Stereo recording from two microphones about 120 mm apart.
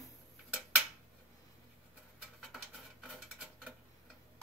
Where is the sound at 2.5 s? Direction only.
Centre (ahead or behind).